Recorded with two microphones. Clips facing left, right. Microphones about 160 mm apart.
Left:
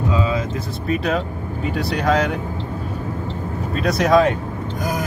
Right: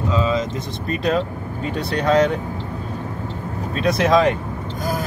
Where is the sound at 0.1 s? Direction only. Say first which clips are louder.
Right 3 dB; 15° left (ahead or behind).